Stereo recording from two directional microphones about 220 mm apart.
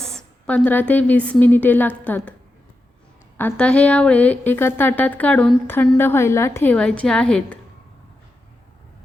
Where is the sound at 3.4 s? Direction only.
5° left (ahead or behind).